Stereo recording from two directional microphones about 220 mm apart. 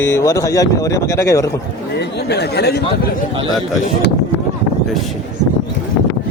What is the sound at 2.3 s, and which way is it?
Speech, 50° left (ahead or behind).